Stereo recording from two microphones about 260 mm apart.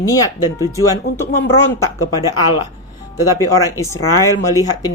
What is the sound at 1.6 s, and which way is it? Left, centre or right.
Speech, centre.